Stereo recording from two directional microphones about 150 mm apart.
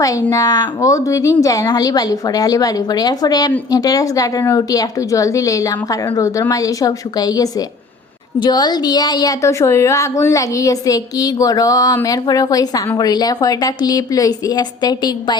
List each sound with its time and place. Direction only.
0.0 s a woman's voice: 25° left (ahead or behind)